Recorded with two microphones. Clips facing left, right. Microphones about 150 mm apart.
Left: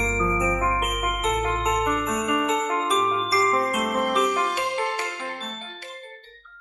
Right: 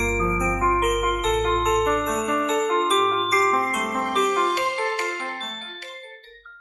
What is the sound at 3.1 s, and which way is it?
Glockenspiel, 10° left (ahead or behind).